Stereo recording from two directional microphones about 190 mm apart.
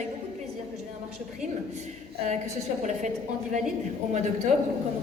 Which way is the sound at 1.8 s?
40° right (ahead or behind).